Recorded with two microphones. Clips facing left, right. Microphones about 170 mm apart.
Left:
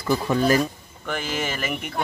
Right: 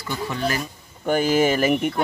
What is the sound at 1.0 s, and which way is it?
Speech, 45° right (ahead or behind).